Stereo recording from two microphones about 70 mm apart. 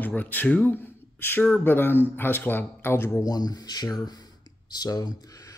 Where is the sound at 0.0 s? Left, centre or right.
Left.